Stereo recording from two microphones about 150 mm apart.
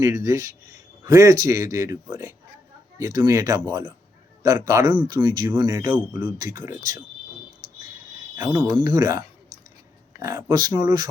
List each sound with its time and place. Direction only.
0.3 s a man's voice: 20° right (ahead or behind)
8.4 s a man's voice: 20° right (ahead or behind)